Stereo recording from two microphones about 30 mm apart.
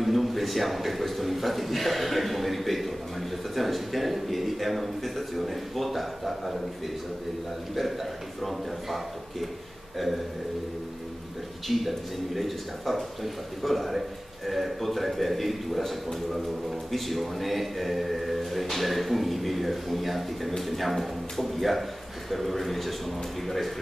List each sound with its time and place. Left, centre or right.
0.0 s a man's voice: centre
7.7 s a man's voice: centre
11.6 s a man's voice: centre